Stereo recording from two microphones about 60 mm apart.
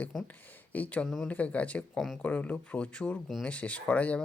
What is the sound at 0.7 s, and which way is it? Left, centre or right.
Speech, left.